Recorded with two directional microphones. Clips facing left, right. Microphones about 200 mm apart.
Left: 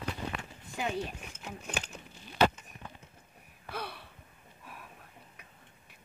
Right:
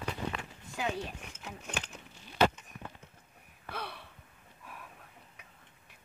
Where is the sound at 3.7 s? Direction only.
5° left (ahead or behind).